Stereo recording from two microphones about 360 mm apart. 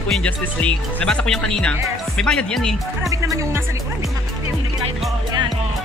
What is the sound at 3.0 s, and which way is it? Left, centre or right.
Music, centre.